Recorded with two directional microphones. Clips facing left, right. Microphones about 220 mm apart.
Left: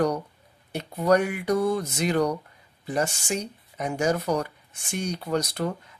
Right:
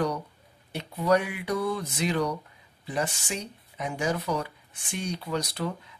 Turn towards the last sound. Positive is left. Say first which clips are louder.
# left 3 dB
turn(degrees=45)  # may be behind; listen again after turning